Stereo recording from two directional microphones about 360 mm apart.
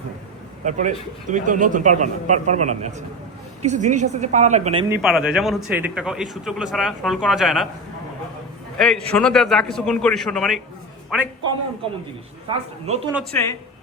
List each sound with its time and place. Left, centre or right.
0.6 s a man's voice: centre
4.9 s speech: centre
8.8 s speech: centre
12.5 s speech: centre
13.1 s speech: centre